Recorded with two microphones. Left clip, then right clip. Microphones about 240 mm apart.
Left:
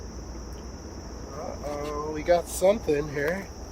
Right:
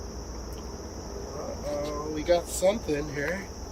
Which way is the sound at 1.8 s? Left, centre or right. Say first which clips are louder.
Even; centre.